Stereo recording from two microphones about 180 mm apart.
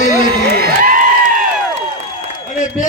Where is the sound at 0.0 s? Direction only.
65° right (ahead or behind).